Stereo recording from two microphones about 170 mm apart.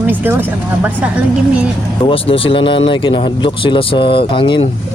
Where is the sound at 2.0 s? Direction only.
30° left (ahead or behind).